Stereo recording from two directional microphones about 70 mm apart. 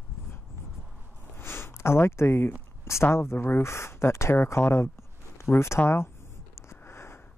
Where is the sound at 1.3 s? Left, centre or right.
Left.